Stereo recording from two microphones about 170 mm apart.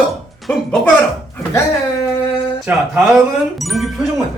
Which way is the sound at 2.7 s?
10° right (ahead or behind).